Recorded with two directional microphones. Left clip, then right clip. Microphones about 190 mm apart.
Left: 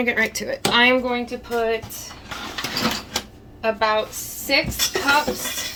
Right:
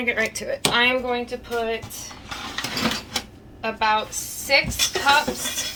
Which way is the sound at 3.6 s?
40° left (ahead or behind).